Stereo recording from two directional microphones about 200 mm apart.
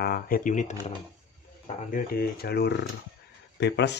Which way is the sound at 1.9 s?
45° left (ahead or behind).